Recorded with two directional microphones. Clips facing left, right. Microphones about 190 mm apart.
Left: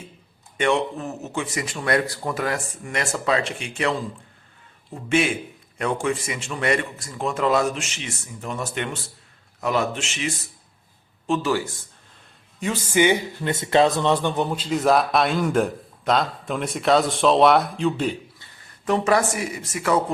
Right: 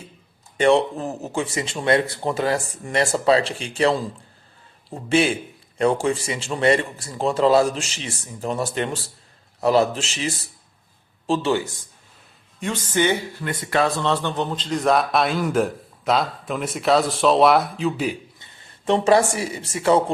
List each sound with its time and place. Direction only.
0.5 s a man's voice: 35° right (ahead or behind)
12.5 s speech: 5° left (ahead or behind)
18.3 s speech: 20° right (ahead or behind)